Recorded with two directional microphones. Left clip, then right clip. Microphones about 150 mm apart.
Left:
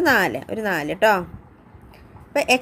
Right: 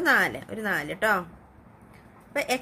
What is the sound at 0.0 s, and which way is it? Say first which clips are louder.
A woman's voice: left 4 dB; 35° left (ahead or behind).